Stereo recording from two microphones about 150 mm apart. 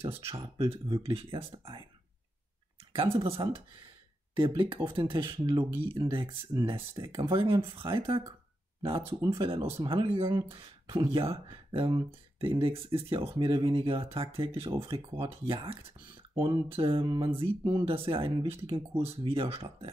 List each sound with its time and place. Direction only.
0.3 s speech: 40° right (ahead or behind)
3.0 s speech: 35° right (ahead or behind)